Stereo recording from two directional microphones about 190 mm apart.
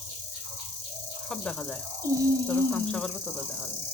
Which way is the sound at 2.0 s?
15° right (ahead or behind).